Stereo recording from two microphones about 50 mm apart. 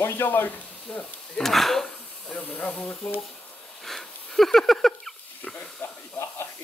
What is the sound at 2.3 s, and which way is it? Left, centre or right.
Speech, left.